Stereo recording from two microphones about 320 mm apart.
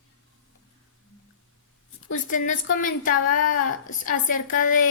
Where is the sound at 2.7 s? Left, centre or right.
Left.